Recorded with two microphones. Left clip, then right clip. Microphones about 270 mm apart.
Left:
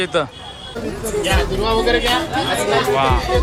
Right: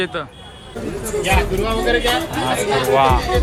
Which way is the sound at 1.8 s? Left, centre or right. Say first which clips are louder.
Right 2 dB; left.